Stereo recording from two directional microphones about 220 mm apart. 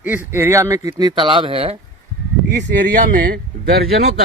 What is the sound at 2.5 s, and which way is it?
Speech, 45° right (ahead or behind).